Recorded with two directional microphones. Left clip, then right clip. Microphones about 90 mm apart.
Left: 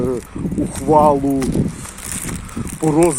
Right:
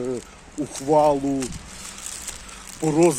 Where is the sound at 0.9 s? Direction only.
30° right (ahead or behind).